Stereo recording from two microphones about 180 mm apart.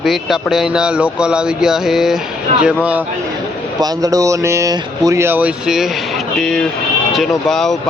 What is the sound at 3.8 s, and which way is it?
Speech, 20° right (ahead or behind).